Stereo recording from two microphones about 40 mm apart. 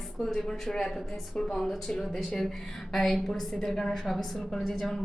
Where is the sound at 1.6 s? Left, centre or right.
Centre.